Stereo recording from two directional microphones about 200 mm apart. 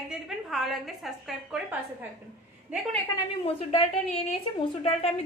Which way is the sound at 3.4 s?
30° left (ahead or behind).